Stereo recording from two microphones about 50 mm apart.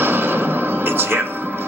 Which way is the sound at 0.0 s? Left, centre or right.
Right.